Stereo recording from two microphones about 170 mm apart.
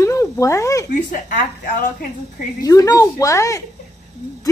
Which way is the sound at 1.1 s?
50° left (ahead or behind).